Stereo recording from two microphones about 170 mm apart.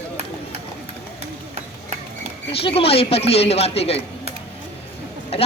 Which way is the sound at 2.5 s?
35° left (ahead or behind).